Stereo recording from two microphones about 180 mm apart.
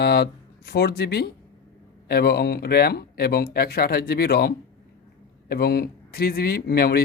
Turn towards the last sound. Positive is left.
turn(degrees=60)  # may be behind; listen again after turning